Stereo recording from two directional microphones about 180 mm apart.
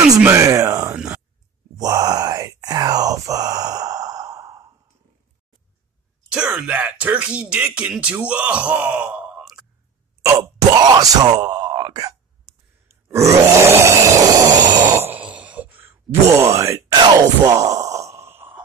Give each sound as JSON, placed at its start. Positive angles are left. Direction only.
{"t": 0.1, "sound": "speech", "side_deg": -15}
{"t": 0.9, "sound": "a sound", "side_deg": -5}
{"t": 1.8, "sound": "groan", "side_deg": -20}
{"t": 6.3, "sound": "speech", "side_deg": -5}
{"t": 10.2, "sound": "speech", "side_deg": -20}
{"t": 13.4, "sound": "a sound", "side_deg": -15}